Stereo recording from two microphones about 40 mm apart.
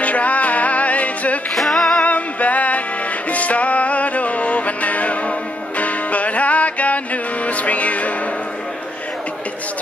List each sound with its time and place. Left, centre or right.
0.0 s music: left
1.5 s music: centre
2.0 s music: left